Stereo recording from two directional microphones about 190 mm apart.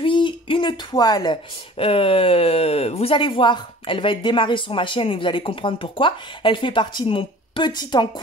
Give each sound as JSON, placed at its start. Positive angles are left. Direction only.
{"t": 0.0, "sound": "speech", "side_deg": 25}